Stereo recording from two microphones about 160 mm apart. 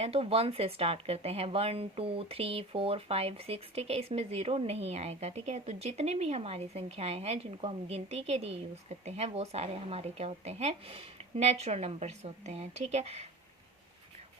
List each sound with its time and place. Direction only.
0.0 s speech: 40° right (ahead or behind)